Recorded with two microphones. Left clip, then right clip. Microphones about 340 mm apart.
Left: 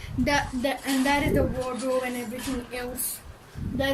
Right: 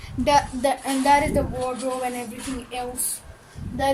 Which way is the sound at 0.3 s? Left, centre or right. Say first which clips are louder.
Right 7 dB; centre.